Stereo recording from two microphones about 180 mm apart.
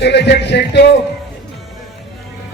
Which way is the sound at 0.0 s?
70° left (ahead or behind).